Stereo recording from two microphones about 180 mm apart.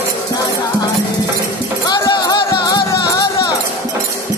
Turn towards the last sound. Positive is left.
turn(degrees=20)  # may be behind; listen again after turning